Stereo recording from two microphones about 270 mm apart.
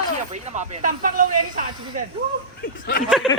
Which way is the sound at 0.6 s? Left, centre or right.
Right.